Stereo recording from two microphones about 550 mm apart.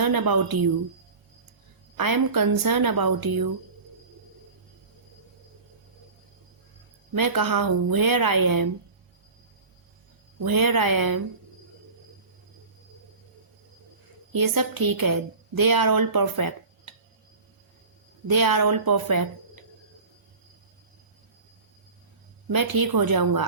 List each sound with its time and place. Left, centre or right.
0.0 s a woman's voice: right
2.0 s a woman's voice: right
7.2 s a woman's voice: right
10.4 s a woman's voice: right
14.3 s a woman's voice: right
18.3 s a woman's voice: right
22.5 s a woman's voice: right